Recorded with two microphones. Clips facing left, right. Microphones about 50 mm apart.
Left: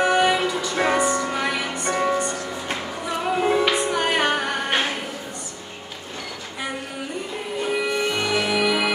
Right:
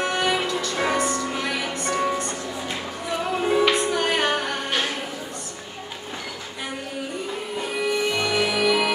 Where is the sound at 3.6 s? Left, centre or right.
Centre.